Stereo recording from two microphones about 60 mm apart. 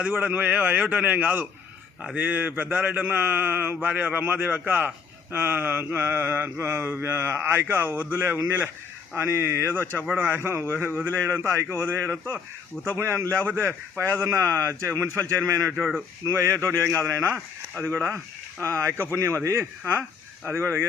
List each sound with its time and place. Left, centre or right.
0.0 s a man's voice: right
3.1 s mantra: right
9.1 s speech: right
10.2 s mantra: right
11.1 s speech: right
12.8 s speech: centre
13.6 s a man's voice: right
18.6 s speech: right
20.5 s mantra: right